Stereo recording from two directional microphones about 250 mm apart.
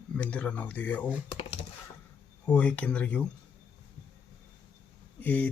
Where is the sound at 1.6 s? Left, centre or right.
Left.